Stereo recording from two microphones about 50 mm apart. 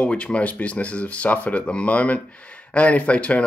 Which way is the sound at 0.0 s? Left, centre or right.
Left.